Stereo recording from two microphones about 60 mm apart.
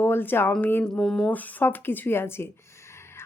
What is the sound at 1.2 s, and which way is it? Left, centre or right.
A woman's voice, left.